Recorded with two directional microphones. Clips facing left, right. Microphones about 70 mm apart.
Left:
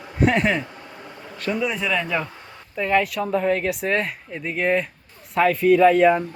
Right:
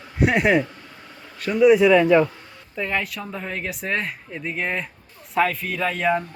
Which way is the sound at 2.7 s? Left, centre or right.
Centre.